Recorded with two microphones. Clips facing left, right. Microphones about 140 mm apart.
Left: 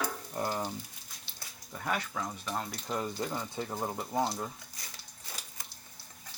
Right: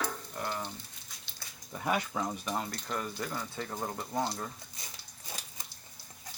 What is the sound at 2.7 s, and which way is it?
Speech, 20° left (ahead or behind).